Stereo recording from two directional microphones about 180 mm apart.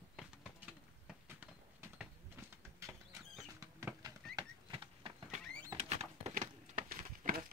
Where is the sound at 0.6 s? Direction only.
10° right (ahead or behind).